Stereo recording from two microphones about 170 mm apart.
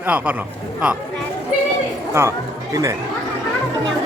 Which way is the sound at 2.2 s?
15° right (ahead or behind).